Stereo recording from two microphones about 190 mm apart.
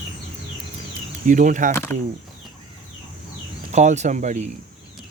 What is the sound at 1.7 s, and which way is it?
Speech, 15° left (ahead or behind).